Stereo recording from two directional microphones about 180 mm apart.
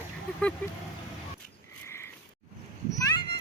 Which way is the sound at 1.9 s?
15° left (ahead or behind).